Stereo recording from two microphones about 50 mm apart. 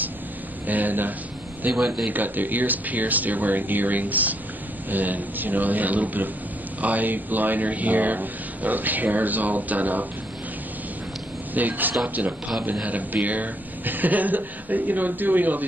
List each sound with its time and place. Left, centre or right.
0.7 s speech: right
1.7 s speech: centre
2.0 s speech: right
11.5 s speech: right